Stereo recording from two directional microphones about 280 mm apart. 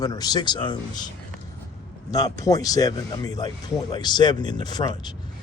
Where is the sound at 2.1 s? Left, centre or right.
Centre.